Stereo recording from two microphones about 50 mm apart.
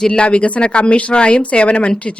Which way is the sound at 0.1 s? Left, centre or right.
Left.